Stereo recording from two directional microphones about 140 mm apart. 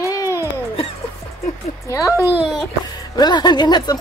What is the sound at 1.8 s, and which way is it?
Speech, 20° left (ahead or behind).